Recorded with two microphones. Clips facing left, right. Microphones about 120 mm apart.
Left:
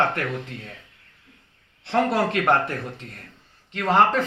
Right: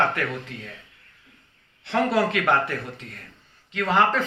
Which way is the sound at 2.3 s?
40° left (ahead or behind).